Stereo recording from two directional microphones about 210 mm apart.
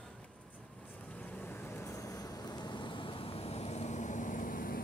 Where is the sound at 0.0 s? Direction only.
5° left (ahead or behind).